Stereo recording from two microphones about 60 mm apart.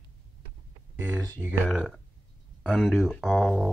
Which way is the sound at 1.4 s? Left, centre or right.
Right.